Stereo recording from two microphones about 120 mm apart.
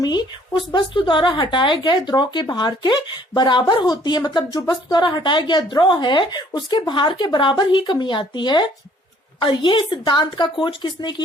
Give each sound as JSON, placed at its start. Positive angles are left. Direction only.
{"t": 0.0, "sound": "speech", "side_deg": 40}